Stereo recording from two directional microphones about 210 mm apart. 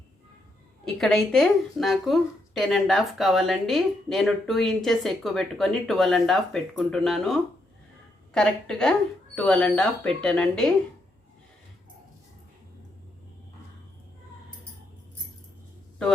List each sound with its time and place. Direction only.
0.9 s a woman's voice: centre (ahead or behind)